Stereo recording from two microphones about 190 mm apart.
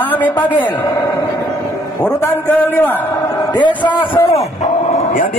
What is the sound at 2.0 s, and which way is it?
Speech, 10° left (ahead or behind).